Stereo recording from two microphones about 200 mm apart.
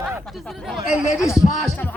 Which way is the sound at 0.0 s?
Centre (ahead or behind).